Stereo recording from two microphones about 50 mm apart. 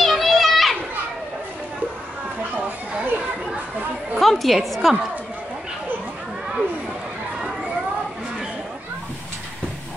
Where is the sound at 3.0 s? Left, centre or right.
Right.